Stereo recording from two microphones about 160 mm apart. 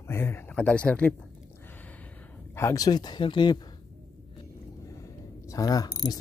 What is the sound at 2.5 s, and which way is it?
Speech, 20° left (ahead or behind).